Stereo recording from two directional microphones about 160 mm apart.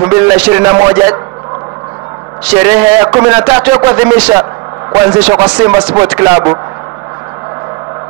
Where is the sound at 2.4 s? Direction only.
15° right (ahead or behind).